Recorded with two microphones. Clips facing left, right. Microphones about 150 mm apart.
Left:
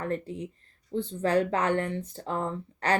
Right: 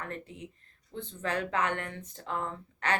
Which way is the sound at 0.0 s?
35° left (ahead or behind).